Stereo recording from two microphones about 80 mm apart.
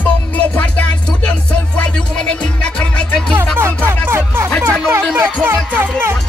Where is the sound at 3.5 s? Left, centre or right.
Right.